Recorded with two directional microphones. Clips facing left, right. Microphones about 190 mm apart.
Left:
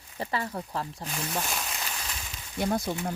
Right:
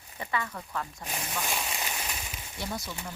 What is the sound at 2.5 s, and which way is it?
Speech, 55° left (ahead or behind).